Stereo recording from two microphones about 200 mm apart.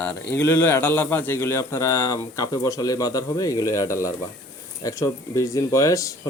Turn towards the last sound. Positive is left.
turn(degrees=15)  # may be behind; listen again after turning